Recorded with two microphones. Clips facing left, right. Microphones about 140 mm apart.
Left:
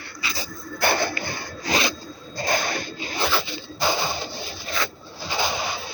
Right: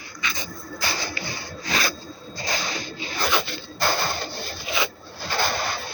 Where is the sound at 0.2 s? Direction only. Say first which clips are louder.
Even; 30° left (ahead or behind).